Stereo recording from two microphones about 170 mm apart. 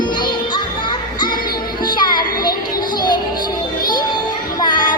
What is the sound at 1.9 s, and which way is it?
Music, 25° left (ahead or behind).